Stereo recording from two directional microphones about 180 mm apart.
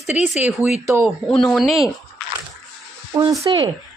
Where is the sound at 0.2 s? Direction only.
40° left (ahead or behind).